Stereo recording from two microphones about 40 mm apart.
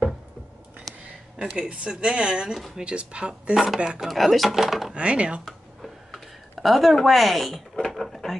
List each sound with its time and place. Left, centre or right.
1.5 s speech: right
3.5 s speech: centre
4.9 s speech: right
5.4 s a sound: centre
7.1 s speech: centre
7.9 s drawer open or close: centre